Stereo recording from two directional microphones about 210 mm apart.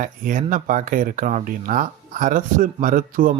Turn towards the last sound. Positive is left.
turn(degrees=-40)  # may be behind; listen again after turning